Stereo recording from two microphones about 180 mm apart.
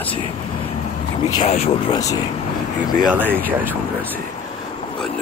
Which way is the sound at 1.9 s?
20° left (ahead or behind).